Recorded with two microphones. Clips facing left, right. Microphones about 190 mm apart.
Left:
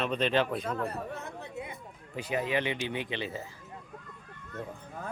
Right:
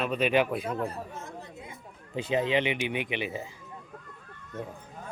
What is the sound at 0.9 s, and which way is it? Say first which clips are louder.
Speech: left 1 dB; 65° left (ahead or behind).